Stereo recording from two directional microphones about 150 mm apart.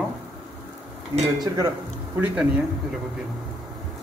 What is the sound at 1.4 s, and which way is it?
Speech, 25° right (ahead or behind).